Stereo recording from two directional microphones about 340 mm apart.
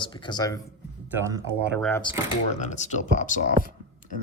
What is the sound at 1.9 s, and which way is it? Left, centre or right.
Speech, centre.